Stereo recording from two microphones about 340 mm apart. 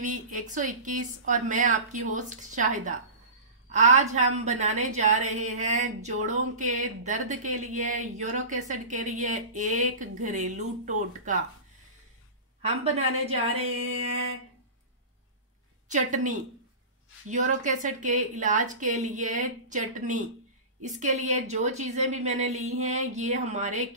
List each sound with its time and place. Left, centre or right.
0.0 s speech: right
12.8 s a woman's voice: centre
15.9 s speech: right
17.5 s speech: right